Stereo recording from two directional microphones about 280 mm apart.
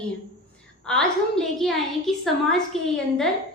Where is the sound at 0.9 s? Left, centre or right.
Centre.